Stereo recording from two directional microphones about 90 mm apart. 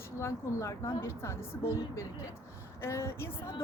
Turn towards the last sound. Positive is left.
turn(degrees=30)  # may be behind; listen again after turning